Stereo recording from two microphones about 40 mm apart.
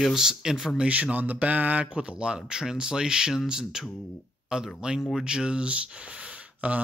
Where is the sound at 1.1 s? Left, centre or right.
Right.